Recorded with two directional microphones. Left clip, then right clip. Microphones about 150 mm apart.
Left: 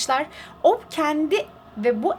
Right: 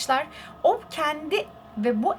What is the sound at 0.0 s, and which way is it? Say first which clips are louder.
A woman's voice: left 2 dB; 30° left (ahead or behind).